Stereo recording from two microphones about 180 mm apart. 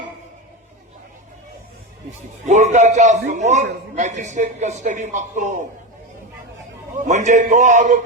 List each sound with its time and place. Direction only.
2.5 s a man's voice: 40° right (ahead or behind)
6.9 s a man's voice: 45° right (ahead or behind)